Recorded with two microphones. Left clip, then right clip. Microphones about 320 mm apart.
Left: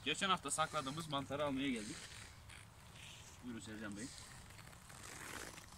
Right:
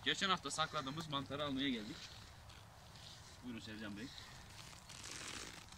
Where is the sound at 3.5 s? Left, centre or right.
Centre.